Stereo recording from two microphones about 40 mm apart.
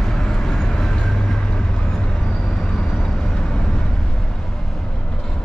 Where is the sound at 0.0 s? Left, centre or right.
Centre.